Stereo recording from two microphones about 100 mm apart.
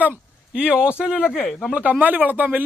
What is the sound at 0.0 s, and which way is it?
Speech, 10° right (ahead or behind).